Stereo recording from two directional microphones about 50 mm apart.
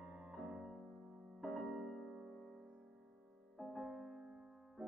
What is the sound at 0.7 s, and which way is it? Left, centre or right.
Music, centre.